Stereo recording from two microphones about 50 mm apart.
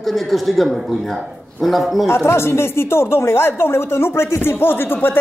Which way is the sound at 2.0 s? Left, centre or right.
Left.